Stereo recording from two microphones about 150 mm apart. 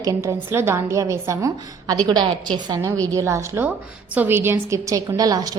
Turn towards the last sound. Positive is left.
turn(degrees=-25)  # may be behind; listen again after turning